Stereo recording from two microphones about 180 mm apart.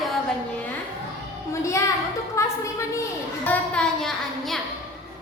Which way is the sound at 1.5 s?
15° left (ahead or behind).